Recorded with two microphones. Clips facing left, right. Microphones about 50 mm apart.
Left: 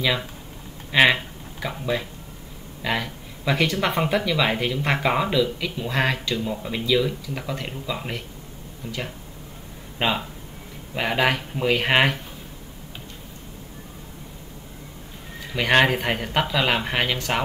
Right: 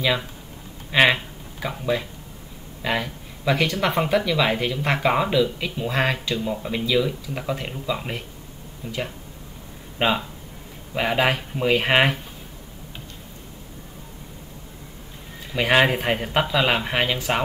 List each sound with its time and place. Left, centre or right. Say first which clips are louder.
0.9 s speech: even; centre
8.8 s speech: right 1 dB; centre
9.9 s speech: right 2 dB; centre
15.5 s speech: even; centre